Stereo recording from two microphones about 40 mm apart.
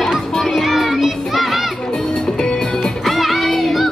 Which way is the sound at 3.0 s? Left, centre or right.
Centre.